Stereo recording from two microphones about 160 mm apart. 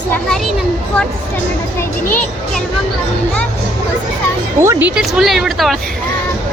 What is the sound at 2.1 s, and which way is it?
Speech, 10° left (ahead or behind).